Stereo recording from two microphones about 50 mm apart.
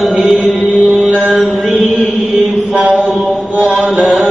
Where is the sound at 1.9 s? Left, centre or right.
Left.